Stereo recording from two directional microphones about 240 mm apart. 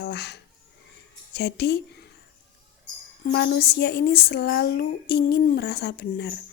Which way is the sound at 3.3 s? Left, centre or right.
Left.